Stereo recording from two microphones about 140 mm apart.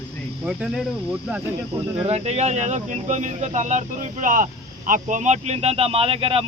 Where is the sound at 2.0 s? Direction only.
50° right (ahead or behind).